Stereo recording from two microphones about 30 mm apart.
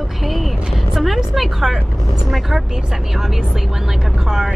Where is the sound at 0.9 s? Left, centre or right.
Centre.